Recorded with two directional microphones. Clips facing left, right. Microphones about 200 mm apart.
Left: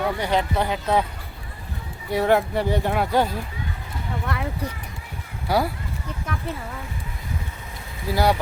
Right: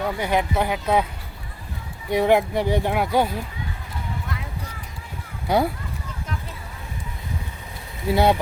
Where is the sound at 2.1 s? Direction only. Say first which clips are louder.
Right 2 dB; 15° right (ahead or behind).